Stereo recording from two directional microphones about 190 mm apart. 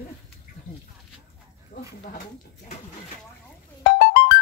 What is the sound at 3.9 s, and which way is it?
Music, 55° left (ahead or behind).